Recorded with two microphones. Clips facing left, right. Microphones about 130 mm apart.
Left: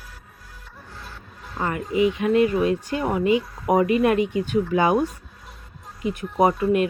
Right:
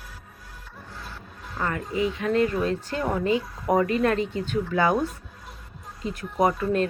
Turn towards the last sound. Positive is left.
turn(degrees=15)  # may be behind; listen again after turning